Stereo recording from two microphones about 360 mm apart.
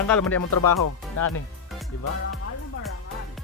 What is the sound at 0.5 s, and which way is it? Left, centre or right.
Speech, left.